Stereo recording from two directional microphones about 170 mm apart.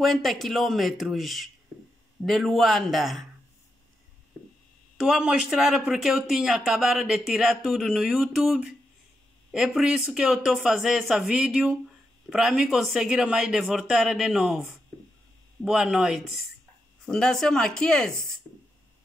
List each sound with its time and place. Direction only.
0.0 s speech: centre (ahead or behind)
4.9 s speech: centre (ahead or behind)